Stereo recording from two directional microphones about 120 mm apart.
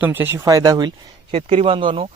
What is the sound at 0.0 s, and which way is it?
Speech, 15° right (ahead or behind).